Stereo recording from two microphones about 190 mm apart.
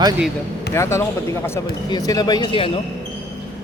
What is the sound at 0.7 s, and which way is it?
Speech, 15° left (ahead or behind).